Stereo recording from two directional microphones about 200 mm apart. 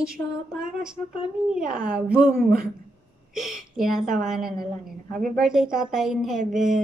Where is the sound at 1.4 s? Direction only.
5° right (ahead or behind).